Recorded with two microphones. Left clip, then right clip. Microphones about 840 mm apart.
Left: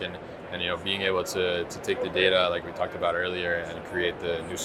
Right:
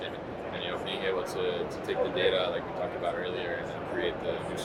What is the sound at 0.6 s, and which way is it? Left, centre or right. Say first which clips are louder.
Speech: left 6 dB; left.